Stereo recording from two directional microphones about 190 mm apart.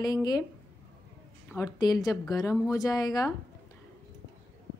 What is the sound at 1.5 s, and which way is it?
A woman's voice, 20° left (ahead or behind).